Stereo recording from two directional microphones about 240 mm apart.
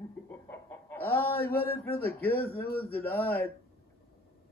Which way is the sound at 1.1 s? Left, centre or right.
Left.